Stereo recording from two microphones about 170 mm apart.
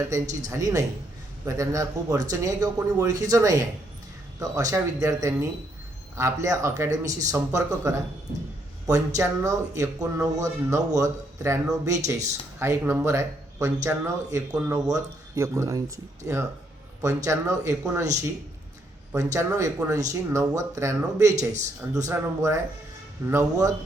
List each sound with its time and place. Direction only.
0.1 s speech: 20° right (ahead or behind)
19.1 s speech: 20° right (ahead or behind)
21.3 s speech: 45° right (ahead or behind)
21.9 s speech: 20° right (ahead or behind)